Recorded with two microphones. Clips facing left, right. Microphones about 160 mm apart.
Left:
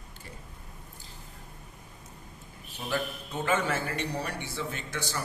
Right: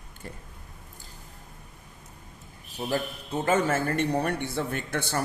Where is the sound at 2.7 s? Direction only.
35° right (ahead or behind).